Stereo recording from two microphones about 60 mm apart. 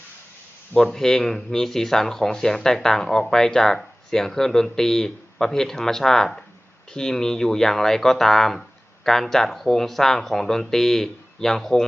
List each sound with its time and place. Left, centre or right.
0.8 s speech: centre